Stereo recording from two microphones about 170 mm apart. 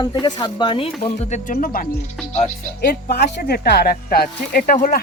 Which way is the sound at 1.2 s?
45° left (ahead or behind).